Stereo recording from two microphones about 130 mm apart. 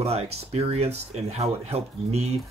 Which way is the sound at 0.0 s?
50° right (ahead or behind).